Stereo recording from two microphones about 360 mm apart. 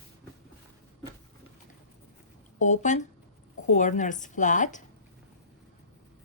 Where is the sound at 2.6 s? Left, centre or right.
Centre.